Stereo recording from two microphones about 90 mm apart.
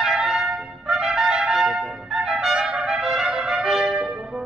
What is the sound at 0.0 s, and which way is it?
Trumpet, 5° right (ahead or behind).